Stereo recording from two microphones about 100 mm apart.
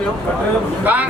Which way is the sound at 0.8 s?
15° right (ahead or behind).